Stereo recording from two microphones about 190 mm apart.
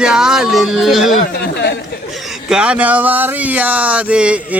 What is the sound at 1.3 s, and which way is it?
Speech, 60° left (ahead or behind).